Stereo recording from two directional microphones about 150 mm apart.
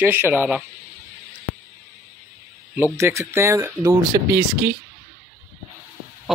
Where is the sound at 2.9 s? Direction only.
20° right (ahead or behind).